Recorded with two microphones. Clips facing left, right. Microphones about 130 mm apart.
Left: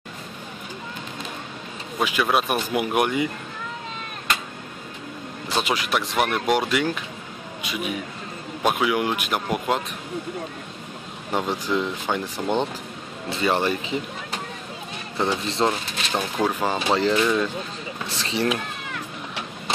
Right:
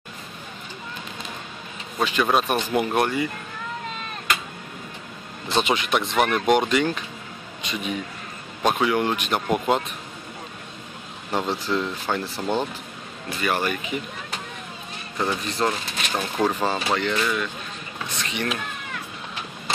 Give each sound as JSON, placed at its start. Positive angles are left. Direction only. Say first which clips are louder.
{"t": 2.0, "sound": "speech", "louder": "right 1 dB", "side_deg": 10}
{"t": 5.5, "sound": "speech", "louder": "right 2 dB", "side_deg": 5}
{"t": 11.3, "sound": "speech", "louder": "left 1 dB", "side_deg": 15}
{"t": 15.1, "sound": "speech", "louder": "left 2 dB", "side_deg": 25}
{"t": 16.2, "sound": "speech", "louder": "even", "side_deg": 10}
{"t": 16.9, "sound": "speech", "louder": "left 4 dB", "side_deg": 30}